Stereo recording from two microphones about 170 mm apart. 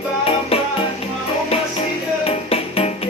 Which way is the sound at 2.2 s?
35° left (ahead or behind).